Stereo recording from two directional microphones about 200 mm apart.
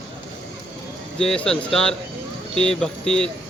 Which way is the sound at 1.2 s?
5° left (ahead or behind).